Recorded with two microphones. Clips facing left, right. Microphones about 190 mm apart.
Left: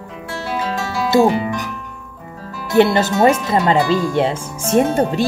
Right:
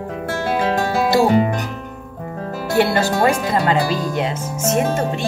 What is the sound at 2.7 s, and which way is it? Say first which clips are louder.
Speech: left 3 dB; 20° left (ahead or behind).